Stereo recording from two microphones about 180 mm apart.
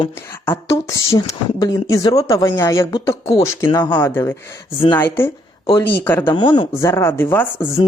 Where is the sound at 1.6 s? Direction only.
20° left (ahead or behind).